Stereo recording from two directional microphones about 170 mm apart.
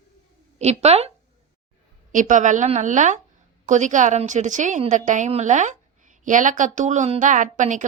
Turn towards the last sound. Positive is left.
turn(degrees=-45)  # may be behind; listen again after turning